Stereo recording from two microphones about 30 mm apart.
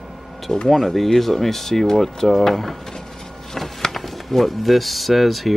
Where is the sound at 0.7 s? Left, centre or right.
Centre.